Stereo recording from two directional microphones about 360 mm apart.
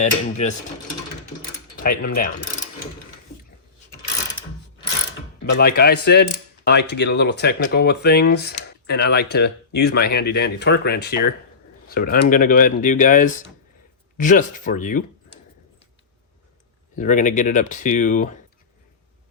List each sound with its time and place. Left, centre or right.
0.0 s speech: centre
1.8 s speech: left
5.4 s speech: left
16.9 s speech: left